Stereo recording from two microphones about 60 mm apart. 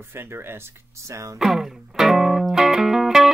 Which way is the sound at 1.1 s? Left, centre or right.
Right.